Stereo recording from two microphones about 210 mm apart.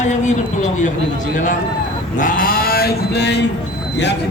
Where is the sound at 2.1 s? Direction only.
40° left (ahead or behind).